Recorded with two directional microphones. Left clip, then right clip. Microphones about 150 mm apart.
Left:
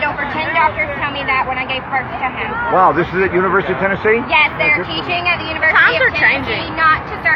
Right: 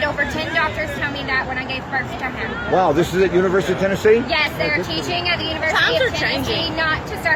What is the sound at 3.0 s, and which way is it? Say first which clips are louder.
Speech: left 2 dB; 45° right (ahead or behind).